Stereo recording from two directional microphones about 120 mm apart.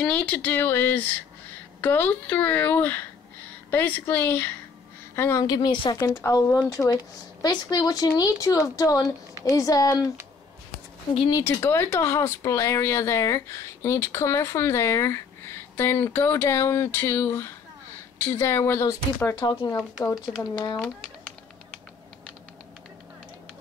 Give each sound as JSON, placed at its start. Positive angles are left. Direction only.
{"t": 0.0, "sound": "a woman's voice", "side_deg": 10}
{"t": 5.9, "sound": "a woman's voice", "side_deg": 25}
{"t": 11.4, "sound": "speech", "side_deg": 20}
{"t": 19.3, "sound": "a woman's voice", "side_deg": 40}